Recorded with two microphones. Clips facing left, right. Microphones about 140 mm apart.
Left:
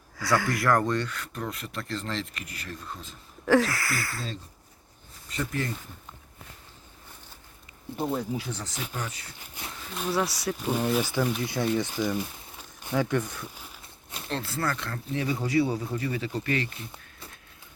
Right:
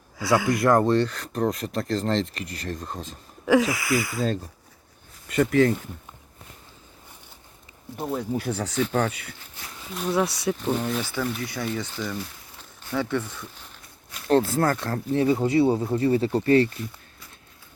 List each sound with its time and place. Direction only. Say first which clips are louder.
0.2 s speech: right 5 dB; 25° right (ahead or behind); by 3.2 s 40° right (ahead or behind)
3.4 s a sound: right 2 dB; centre (ahead or behind)
3.8 s speech: right 8 dB; 20° right (ahead or behind)
5.3 s speech: right 12 dB; 65° right (ahead or behind)
7.9 s speech: even; centre (ahead or behind)
8.3 s speech: right 6 dB; 55° right (ahead or behind)
9.9 s speech: right 4 dB; centre (ahead or behind)
14.3 s speech: right 10 dB; 45° right (ahead or behind)
15.2 s speech: right 5 dB; 25° right (ahead or behind)